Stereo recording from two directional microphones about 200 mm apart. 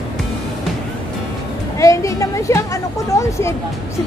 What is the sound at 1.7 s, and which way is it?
A woman's voice, 15° left (ahead or behind).